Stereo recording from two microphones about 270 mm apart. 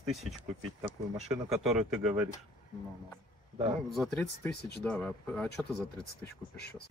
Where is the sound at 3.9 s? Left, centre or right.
Centre.